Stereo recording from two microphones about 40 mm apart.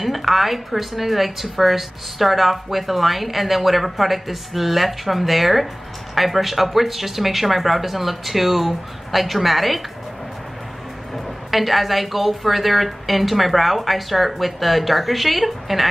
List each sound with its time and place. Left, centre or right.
0.0 s a woman's voice: centre
11.5 s a woman's voice: centre